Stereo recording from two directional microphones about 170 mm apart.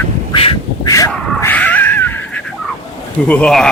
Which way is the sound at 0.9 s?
20° left (ahead or behind).